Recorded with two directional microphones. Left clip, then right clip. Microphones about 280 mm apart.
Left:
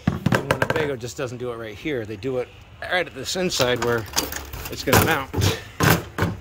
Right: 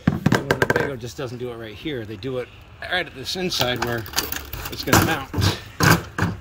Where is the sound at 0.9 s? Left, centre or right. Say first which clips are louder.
Left 2 dB; centre.